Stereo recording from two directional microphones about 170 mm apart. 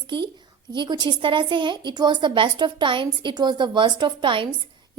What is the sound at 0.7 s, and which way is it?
A woman's voice, 25° right (ahead or behind).